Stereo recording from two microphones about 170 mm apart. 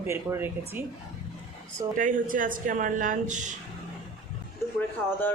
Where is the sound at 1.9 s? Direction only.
50° right (ahead or behind).